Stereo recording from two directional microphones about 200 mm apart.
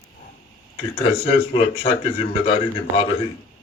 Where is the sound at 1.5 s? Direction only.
35° left (ahead or behind).